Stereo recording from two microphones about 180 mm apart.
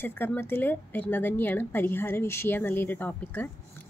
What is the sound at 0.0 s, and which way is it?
A woman's voice, 10° left (ahead or behind).